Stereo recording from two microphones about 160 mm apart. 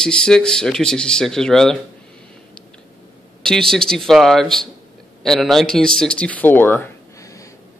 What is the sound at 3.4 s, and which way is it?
Speech, 5° left (ahead or behind).